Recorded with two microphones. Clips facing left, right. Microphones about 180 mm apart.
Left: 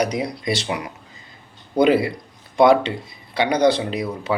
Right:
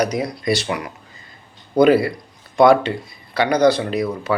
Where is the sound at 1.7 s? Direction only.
20° left (ahead or behind).